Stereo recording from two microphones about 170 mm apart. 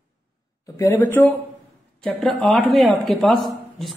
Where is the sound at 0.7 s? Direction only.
15° left (ahead or behind).